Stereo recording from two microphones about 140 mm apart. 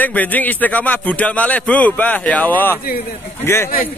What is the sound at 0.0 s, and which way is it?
A man's voice, 10° left (ahead or behind).